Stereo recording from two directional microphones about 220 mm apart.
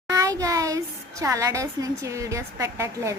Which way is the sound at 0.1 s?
15° right (ahead or behind).